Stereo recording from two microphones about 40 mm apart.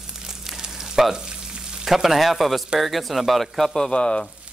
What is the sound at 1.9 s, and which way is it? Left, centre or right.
Speech, centre.